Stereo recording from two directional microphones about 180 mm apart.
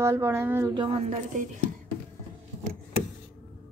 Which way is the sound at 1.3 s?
45° right (ahead or behind).